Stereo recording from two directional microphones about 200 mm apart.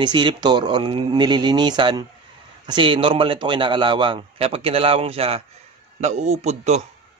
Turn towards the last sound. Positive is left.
turn(degrees=-35)  # may be behind; listen again after turning